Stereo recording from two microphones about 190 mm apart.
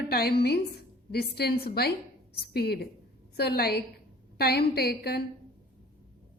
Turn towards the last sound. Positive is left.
turn(degrees=55)  # may be behind; listen again after turning